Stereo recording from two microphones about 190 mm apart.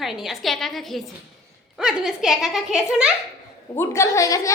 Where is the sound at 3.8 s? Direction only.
15° left (ahead or behind).